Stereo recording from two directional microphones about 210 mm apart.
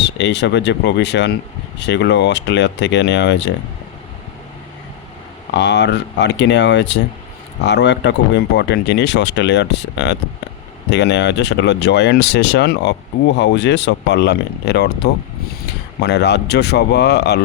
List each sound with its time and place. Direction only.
0.0 s speech: 55° left (ahead or behind)
5.5 s speech: 55° left (ahead or behind)